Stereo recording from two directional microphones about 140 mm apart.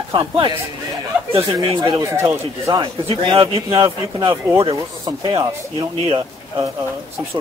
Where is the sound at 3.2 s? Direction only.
35° right (ahead or behind).